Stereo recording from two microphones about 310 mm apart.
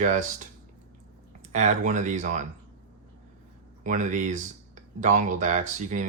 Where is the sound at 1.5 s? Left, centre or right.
Right.